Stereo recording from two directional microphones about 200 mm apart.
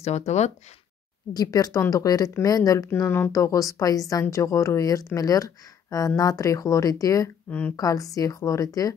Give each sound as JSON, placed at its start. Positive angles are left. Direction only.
{"t": 0.0, "sound": "speech", "side_deg": 35}
{"t": 1.3, "sound": "speech", "side_deg": 20}